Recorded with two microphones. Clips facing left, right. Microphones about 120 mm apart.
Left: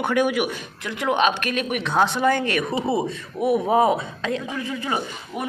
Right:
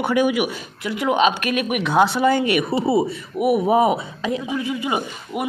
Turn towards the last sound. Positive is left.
turn(degrees=-10)  # may be behind; listen again after turning